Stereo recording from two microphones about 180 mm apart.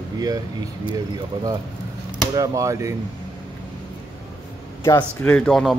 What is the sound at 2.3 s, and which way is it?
Speech, 20° right (ahead or behind).